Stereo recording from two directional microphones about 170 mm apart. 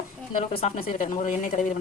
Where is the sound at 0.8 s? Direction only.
55° left (ahead or behind).